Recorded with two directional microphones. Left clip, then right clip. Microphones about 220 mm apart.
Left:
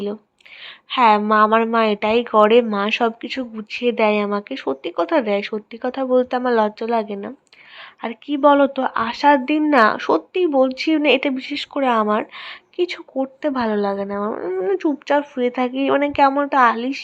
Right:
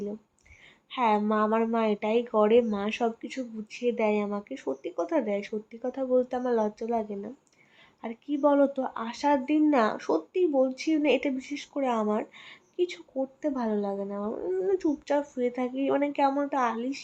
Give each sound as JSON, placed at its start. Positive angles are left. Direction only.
{"t": 0.9, "sound": "speech", "side_deg": 15}